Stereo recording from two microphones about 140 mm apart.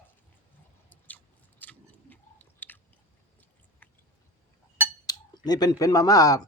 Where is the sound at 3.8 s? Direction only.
10° left (ahead or behind).